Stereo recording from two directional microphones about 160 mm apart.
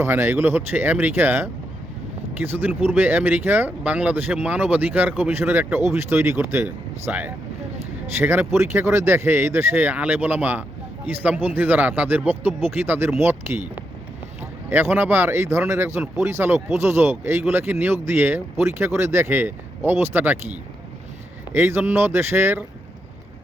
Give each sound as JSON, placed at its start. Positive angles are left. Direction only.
{"t": 0.0, "sound": "speech", "side_deg": -15}
{"t": 14.7, "sound": "speech", "side_deg": -15}
{"t": 21.5, "sound": "speech", "side_deg": -15}